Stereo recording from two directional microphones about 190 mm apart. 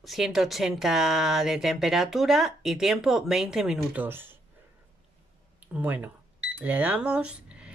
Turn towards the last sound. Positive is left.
turn(degrees=-5)  # may be behind; listen again after turning